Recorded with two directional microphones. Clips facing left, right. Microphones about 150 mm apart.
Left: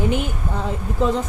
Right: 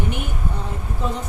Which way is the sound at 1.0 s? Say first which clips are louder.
Left 8 dB; 90° left.